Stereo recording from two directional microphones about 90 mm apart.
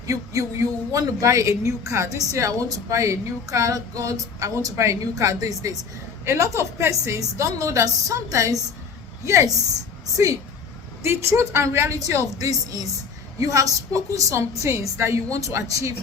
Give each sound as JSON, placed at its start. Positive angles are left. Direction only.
{"t": 0.1, "sound": "speech", "side_deg": -35}
{"t": 11.0, "sound": "speech", "side_deg": -30}